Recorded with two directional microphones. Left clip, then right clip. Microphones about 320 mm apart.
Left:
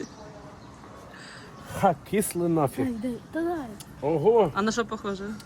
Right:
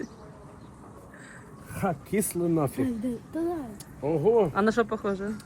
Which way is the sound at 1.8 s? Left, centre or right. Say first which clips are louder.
Left 5 dB; centre.